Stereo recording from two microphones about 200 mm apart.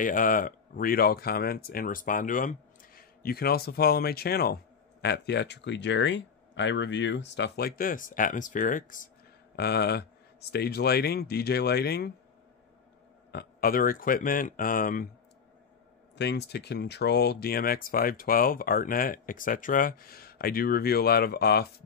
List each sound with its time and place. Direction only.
0.0 s speech: 40° left (ahead or behind)
9.6 s speech: 55° left (ahead or behind)
13.3 s speech: 50° left (ahead or behind)
16.2 s speech: 60° left (ahead or behind)